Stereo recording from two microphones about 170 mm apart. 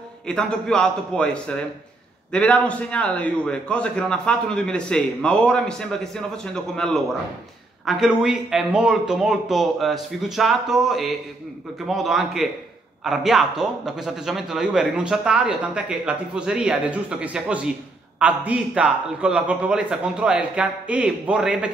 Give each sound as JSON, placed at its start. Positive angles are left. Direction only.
{"t": 0.3, "sound": "a man's voice", "side_deg": 5}